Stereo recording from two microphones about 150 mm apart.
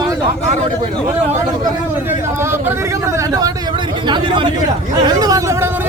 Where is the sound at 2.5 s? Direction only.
15° right (ahead or behind).